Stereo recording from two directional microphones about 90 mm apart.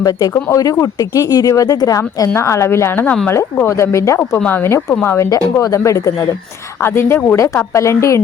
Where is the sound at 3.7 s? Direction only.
30° left (ahead or behind).